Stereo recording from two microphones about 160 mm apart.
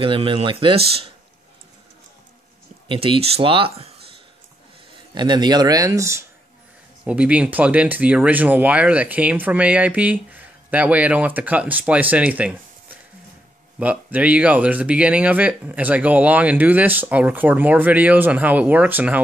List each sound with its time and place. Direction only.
0.0 s speech: 30° right (ahead or behind)
2.9 s speech: 35° right (ahead or behind)
5.1 s speech: 30° right (ahead or behind)
7.1 s speech: 10° right (ahead or behind)
13.7 s speech: 10° right (ahead or behind)